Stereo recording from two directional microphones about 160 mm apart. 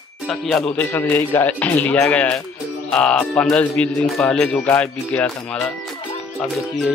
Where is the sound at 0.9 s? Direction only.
15° left (ahead or behind).